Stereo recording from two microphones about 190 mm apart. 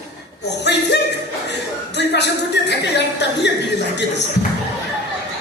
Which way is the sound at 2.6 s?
65° left (ahead or behind).